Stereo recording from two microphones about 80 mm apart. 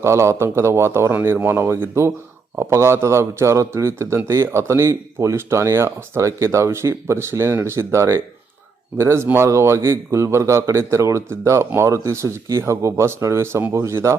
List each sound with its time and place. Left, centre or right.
0.0 s a man's voice: right